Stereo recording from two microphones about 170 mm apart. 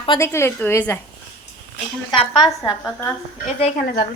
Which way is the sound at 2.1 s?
25° left (ahead or behind).